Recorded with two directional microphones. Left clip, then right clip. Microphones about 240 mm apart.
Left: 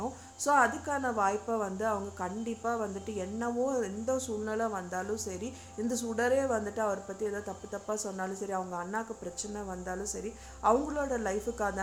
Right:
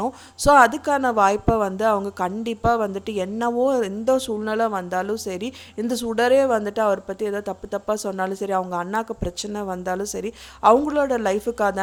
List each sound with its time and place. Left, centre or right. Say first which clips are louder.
0.0 s speech: right 13 dB; right